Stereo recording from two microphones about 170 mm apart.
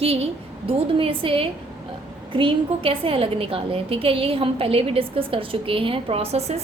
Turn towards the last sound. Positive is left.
turn(degrees=-40)  # may be behind; listen again after turning